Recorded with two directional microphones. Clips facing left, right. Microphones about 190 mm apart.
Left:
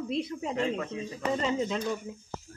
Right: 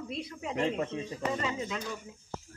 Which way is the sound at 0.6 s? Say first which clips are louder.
Right 3 dB; 30° right (ahead or behind).